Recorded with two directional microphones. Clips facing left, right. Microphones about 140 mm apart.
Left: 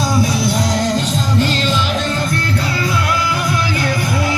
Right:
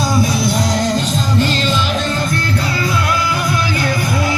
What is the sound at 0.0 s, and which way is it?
Music, 50° right (ahead or behind).